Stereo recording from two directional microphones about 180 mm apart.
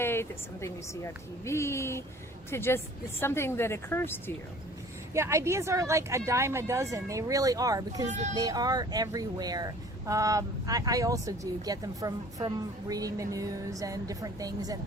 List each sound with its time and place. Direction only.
0.0 s a woman's voice: 15° left (ahead or behind)
5.1 s speech: 15° right (ahead or behind)